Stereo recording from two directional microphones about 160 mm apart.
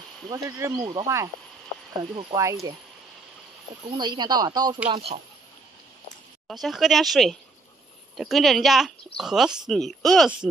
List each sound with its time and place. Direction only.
0.3 s speech: 20° right (ahead or behind)
2.3 s speech: 20° right (ahead or behind)
3.9 s speech: 25° right (ahead or behind)
4.8 s speech: 40° right (ahead or behind)
6.4 s speech: centre (ahead or behind)